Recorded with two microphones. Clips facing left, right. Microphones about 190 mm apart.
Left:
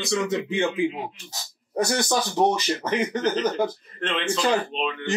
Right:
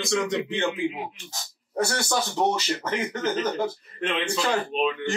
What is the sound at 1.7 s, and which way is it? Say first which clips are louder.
A man's voice: left 2 dB; 15° left (ahead or behind).